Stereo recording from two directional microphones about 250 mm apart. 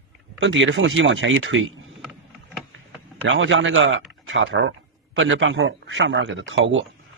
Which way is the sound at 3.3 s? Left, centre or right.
Right.